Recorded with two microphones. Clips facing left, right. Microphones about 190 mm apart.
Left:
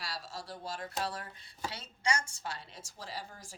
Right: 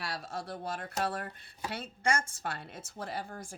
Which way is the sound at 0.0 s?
60° right (ahead or behind).